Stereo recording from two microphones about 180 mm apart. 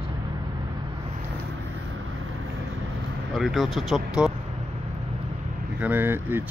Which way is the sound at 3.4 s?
Centre (ahead or behind).